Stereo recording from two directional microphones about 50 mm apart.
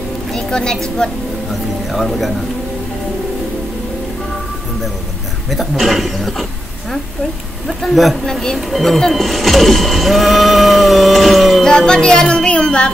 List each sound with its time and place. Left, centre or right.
0.3 s a woman's voice: centre
1.9 s speech: centre
5.5 s speech: centre
7.6 s speech: centre
8.3 s speech: centre
11.6 s music: centre
12.6 s speech: centre